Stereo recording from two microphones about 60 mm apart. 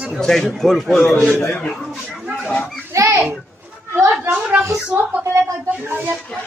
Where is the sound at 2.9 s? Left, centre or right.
Right.